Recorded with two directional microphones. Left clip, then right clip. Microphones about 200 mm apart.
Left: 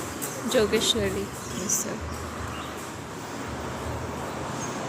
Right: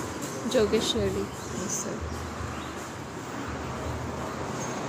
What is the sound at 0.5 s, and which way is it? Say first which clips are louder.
Speech: left 2 dB; centre (ahead or behind).